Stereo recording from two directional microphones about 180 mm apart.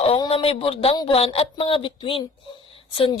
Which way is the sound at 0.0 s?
30° left (ahead or behind).